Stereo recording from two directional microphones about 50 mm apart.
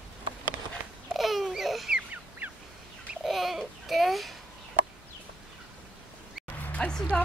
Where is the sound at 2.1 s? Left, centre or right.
Right.